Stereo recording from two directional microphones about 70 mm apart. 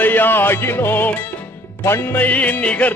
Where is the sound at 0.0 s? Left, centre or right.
Left.